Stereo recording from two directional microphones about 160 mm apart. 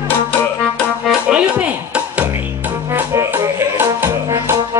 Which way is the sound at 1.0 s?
5° right (ahead or behind).